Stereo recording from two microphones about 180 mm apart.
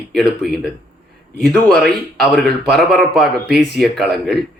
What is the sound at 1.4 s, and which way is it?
A man's voice, 5° left (ahead or behind).